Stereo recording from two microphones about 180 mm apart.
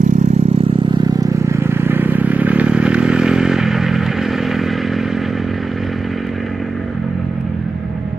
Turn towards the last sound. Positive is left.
turn(degrees=0)  # may be behind; listen again after turning